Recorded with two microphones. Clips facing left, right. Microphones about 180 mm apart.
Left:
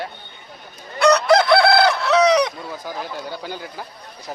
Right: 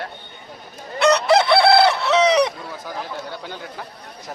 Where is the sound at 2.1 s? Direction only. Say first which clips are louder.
Left 3 dB; 25° right (ahead or behind).